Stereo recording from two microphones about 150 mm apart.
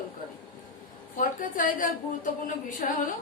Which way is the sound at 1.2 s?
65° left (ahead or behind).